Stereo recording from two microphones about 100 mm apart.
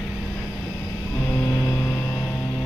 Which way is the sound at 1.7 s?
20° left (ahead or behind).